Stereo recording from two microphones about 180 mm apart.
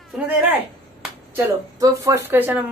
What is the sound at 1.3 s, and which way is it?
Speech, 20° right (ahead or behind).